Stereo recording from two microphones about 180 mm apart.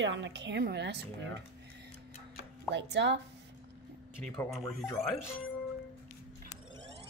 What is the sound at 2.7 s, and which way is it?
Speech, 80° right.